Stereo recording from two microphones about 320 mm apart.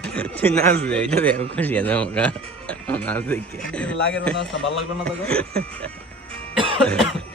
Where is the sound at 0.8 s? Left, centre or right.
Centre.